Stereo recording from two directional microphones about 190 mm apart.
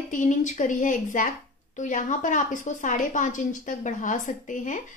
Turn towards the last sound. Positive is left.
turn(degrees=40)  # may be behind; listen again after turning